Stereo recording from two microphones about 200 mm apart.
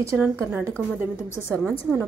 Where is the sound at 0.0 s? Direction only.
15° right (ahead or behind).